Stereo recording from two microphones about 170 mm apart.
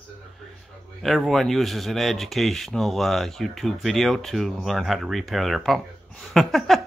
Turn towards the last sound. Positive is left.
turn(degrees=0)  # may be behind; listen again after turning